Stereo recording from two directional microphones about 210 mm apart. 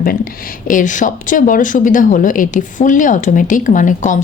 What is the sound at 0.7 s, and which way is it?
Speech, 40° left (ahead or behind).